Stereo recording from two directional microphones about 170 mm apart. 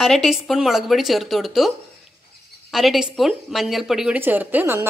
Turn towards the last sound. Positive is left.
turn(degrees=-10)  # may be behind; listen again after turning